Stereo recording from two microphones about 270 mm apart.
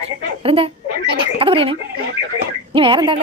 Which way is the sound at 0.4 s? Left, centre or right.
Right.